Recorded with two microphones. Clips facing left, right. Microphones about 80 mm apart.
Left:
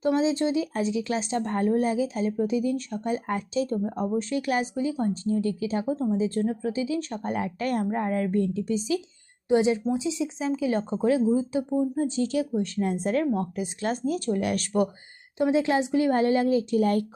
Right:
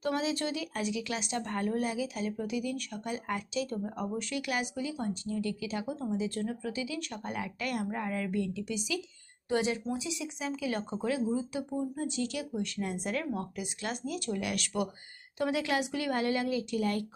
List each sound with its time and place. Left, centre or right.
0.0 s speech: left
9.5 s speech: left
15.4 s speech: left